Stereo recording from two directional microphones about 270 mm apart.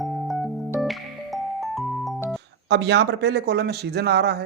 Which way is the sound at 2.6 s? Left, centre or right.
Right.